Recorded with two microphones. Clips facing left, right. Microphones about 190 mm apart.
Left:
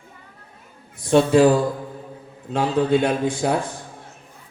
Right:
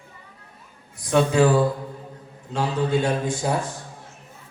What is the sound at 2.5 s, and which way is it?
Speech, 55° left (ahead or behind).